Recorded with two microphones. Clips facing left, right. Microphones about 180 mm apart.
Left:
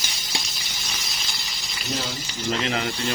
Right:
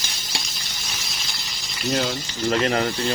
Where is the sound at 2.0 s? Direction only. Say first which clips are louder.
Right 8 dB; 65° right (ahead or behind).